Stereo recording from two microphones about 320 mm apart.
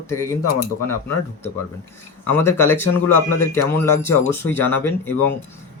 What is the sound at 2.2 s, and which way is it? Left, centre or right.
Speech, centre.